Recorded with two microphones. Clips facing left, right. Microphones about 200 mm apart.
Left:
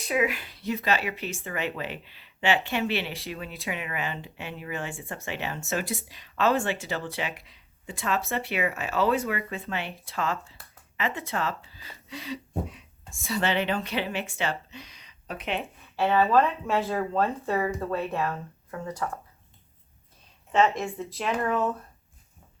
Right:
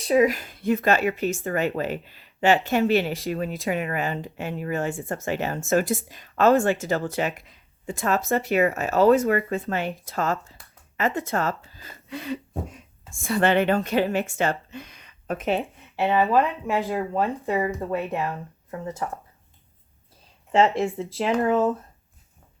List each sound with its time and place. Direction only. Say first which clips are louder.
0.0 s speech: right 7 dB; 35° right (ahead or behind)
16.0 s speech: right 1 dB; 15° right (ahead or behind)
20.5 s speech: right 4 dB; 30° right (ahead or behind)